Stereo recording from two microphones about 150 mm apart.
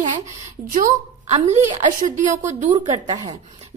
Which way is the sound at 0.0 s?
55° right (ahead or behind).